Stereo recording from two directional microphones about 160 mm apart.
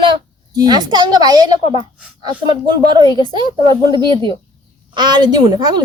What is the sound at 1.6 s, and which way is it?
Speech, 35° left (ahead or behind).